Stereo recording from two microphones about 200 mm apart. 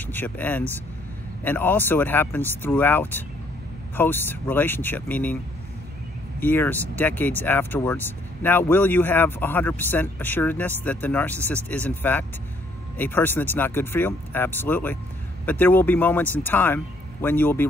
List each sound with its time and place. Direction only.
0.0 s speech: 10° left (ahead or behind)
6.4 s speech: 10° left (ahead or behind)